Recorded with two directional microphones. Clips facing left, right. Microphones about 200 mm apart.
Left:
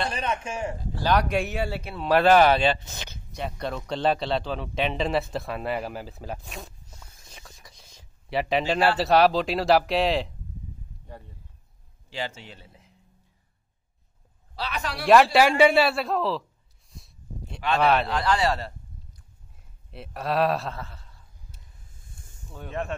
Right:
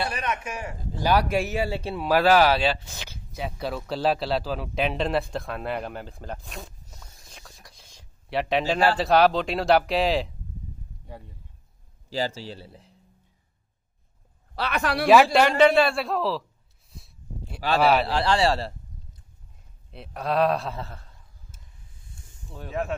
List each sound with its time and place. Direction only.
0.1 s a man's voice: 30° left (ahead or behind)
0.9 s speech: 10° right (ahead or behind)
1.7 s speech: 30° right (ahead or behind)
2.0 s speech: 5° right (ahead or behind)
12.1 s a man's voice: 35° right (ahead or behind)
14.5 s a man's voice: 60° right (ahead or behind)
15.3 s speech: 5° left (ahead or behind)
16.9 s a sound: centre (ahead or behind)
17.7 s speech: centre (ahead or behind)
18.0 s a man's voice: 30° right (ahead or behind)
19.9 s speech: centre (ahead or behind)
21.5 s a sound: 45° right (ahead or behind)
22.5 s speech: centre (ahead or behind)